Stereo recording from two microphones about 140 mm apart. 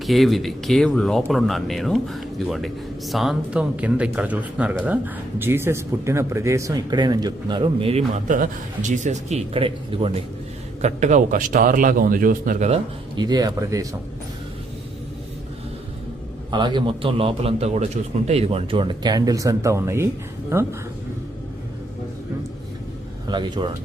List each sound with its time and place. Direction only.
0.0 s speech: centre (ahead or behind); by 8.0 s 45° right (ahead or behind)
8.1 s speech: 65° right (ahead or behind); by 10.2 s 40° right (ahead or behind)
10.8 s a man's voice: 55° right (ahead or behind); by 12.6 s 80° right
13.1 s speech: 30° right (ahead or behind)
16.5 s a man's voice: 35° right (ahead or behind); by 20.7 s 15° right (ahead or behind)
23.2 s speech: 30° right (ahead or behind)